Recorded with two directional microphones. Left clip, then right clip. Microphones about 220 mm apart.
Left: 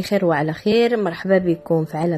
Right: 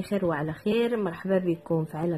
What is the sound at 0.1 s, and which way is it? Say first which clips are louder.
Speech: left 9 dB; 20° left (ahead or behind).